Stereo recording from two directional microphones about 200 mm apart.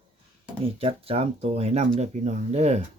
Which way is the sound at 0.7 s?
30° right (ahead or behind).